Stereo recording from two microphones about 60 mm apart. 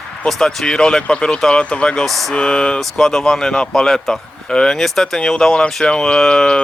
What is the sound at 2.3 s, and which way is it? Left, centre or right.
Speech, centre.